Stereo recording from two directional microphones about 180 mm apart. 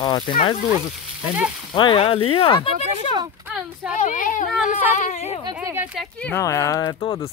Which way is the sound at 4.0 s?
45° left (ahead or behind).